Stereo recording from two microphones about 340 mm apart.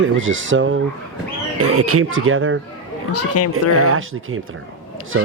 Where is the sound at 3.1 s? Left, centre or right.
Left.